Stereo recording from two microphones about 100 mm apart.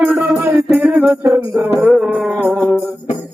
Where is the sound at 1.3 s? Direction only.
25° right (ahead or behind).